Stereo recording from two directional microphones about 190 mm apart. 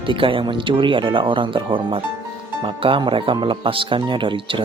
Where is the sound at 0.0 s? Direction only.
25° right (ahead or behind).